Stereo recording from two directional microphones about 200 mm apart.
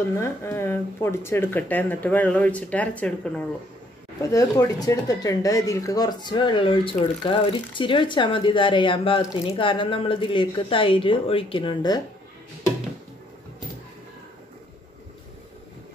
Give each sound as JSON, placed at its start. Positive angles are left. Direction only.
{"t": 0.2, "sound": "speech", "side_deg": 10}